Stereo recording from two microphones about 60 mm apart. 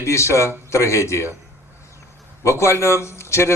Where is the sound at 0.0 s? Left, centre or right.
Left.